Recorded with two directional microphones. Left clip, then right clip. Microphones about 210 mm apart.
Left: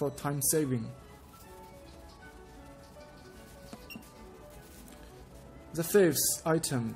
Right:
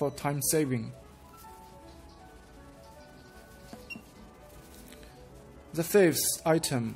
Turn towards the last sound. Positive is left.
turn(degrees=-15)  # may be behind; listen again after turning